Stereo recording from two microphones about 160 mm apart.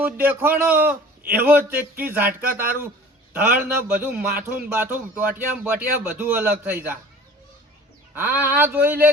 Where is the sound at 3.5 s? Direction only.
10° right (ahead or behind).